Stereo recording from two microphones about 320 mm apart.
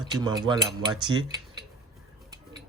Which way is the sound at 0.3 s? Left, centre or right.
Centre.